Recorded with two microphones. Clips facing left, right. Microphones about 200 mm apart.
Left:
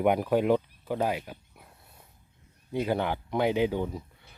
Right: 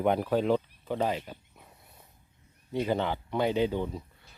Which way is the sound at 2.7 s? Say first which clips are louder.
Left 1 dB; 10° left (ahead or behind).